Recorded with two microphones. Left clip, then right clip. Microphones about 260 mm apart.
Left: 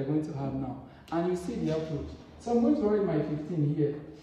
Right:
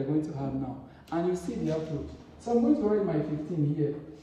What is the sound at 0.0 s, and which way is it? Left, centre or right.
A man's voice, left.